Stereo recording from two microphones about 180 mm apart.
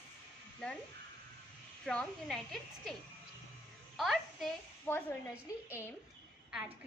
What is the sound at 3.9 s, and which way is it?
A woman's voice, centre (ahead or behind).